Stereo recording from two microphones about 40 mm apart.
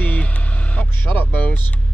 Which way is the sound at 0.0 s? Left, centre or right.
Left.